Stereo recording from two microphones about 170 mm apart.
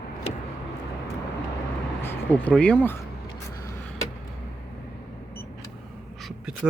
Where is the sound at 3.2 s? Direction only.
20° left (ahead or behind).